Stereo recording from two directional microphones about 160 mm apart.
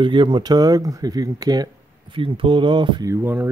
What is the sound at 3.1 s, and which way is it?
Speech, 10° right (ahead or behind).